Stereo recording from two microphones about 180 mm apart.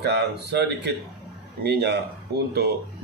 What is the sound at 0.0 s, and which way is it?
Speech, 65° right (ahead or behind).